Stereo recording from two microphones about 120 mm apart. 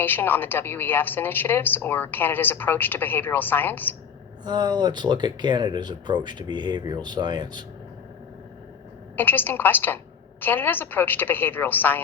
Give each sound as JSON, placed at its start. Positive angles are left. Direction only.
{"t": 0.0, "sound": "a woman's voice", "side_deg": 15}
{"t": 4.4, "sound": "speech", "side_deg": -35}
{"t": 9.1, "sound": "a woman's voice", "side_deg": 15}